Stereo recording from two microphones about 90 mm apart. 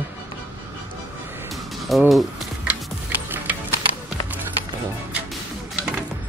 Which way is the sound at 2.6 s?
15° right (ahead or behind).